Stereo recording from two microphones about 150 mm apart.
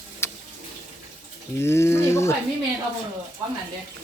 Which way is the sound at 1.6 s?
15° left (ahead or behind).